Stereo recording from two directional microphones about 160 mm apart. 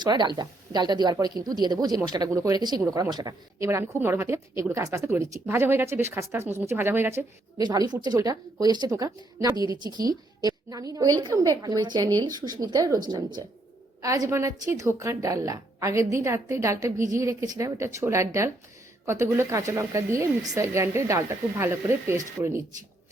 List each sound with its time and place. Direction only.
0.0 s a woman's voice: 25° right (ahead or behind)
7.6 s a woman's voice: 25° right (ahead or behind)